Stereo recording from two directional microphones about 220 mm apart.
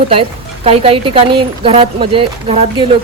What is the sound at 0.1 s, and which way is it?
A woman's voice, 25° right (ahead or behind).